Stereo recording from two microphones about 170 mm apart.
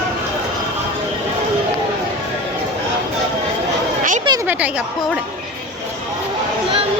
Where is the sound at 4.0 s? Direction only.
50° right (ahead or behind).